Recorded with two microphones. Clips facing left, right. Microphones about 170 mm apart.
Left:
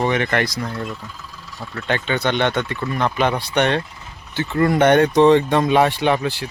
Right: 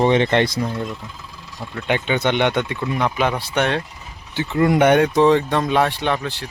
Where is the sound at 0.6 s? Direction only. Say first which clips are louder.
Right 2 dB; 15° right (ahead or behind).